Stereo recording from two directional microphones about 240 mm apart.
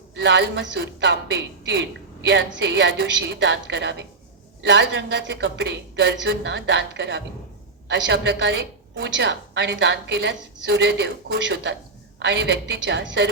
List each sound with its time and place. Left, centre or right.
0.1 s a woman's voice: right